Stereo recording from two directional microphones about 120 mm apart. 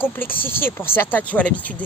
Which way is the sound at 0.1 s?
15° left (ahead or behind).